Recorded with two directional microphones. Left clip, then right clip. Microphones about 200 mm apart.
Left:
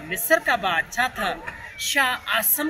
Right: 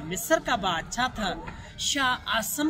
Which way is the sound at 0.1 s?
15° right (ahead or behind).